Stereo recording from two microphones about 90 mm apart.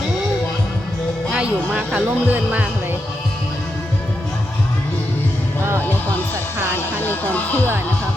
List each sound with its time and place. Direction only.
1.3 s speech: 10° right (ahead or behind)
7.0 s speech: 20° left (ahead or behind)